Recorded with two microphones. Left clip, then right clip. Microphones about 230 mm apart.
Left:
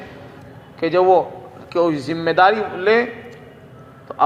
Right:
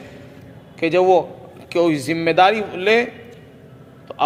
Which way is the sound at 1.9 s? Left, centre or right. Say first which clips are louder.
Right 2 dB; right.